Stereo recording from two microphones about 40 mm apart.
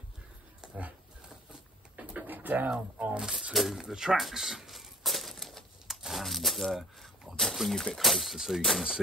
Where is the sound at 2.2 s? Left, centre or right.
Right.